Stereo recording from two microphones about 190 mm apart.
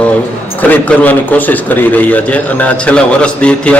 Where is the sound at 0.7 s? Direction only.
10° left (ahead or behind).